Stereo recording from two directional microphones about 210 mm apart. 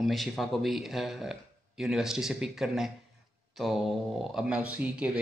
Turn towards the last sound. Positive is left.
turn(degrees=-5)  # may be behind; listen again after turning